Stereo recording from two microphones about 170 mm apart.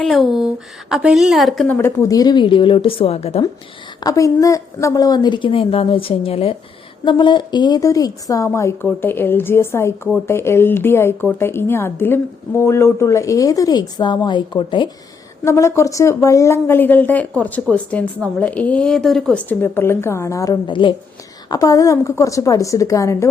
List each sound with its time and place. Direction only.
0.0 s a woman's voice: centre (ahead or behind)
1.6 s a woman's voice: 15° left (ahead or behind); by 3.4 s 35° left (ahead or behind)
4.0 s a woman's voice: 20° left (ahead or behind)
15.4 s a woman's voice: 15° left (ahead or behind)